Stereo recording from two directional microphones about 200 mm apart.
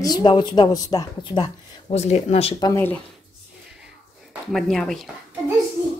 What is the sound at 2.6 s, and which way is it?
Speech, 15° left (ahead or behind).